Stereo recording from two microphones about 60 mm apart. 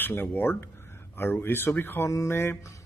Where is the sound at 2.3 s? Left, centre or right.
Left.